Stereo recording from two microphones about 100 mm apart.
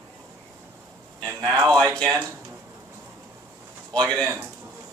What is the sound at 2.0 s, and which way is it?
Speech, 25° right (ahead or behind).